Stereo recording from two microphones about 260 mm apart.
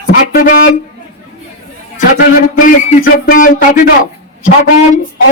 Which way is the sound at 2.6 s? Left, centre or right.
Left.